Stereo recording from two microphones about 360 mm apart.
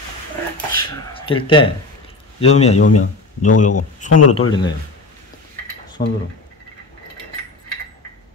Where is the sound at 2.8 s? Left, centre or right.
Left.